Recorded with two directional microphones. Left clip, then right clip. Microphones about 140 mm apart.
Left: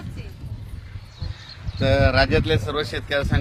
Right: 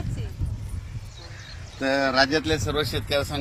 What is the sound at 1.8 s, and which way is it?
Speech, 65° left (ahead or behind).